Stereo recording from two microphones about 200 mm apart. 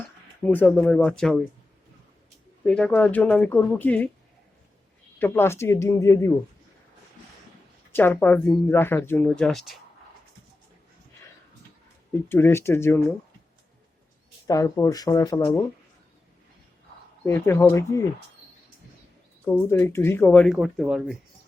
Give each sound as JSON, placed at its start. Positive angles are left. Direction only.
{"t": 0.4, "sound": "speech", "side_deg": 5}
{"t": 2.6, "sound": "speech", "side_deg": 5}
{"t": 5.2, "sound": "speech", "side_deg": 10}
{"t": 7.9, "sound": "speech", "side_deg": 10}
{"t": 12.1, "sound": "speech", "side_deg": 10}
{"t": 14.4, "sound": "speech", "side_deg": 15}
{"t": 17.2, "sound": "speech", "side_deg": 10}
{"t": 19.6, "sound": "speech", "side_deg": 10}